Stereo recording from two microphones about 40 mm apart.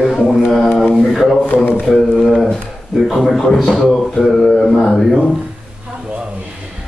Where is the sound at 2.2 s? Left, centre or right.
Centre.